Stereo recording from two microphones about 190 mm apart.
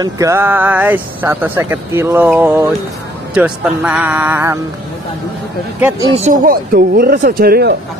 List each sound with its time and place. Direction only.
0.0 s speech: 15° right (ahead or behind)
5.8 s speech: 10° right (ahead or behind)
6.1 s speech: 40° right (ahead or behind)